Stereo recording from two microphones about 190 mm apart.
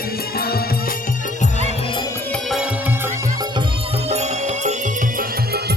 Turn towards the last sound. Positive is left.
turn(degrees=-35)  # may be behind; listen again after turning